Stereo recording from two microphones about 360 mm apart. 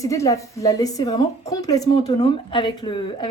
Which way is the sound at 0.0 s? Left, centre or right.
Centre.